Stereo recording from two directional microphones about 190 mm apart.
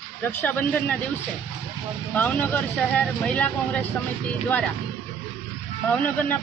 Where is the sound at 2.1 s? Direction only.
10° left (ahead or behind).